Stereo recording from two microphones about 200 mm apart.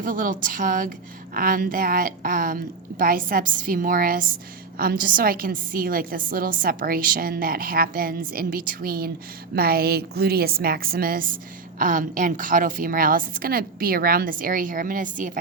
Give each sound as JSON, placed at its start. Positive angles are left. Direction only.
{"t": 0.0, "sound": "a woman's voice", "side_deg": -45}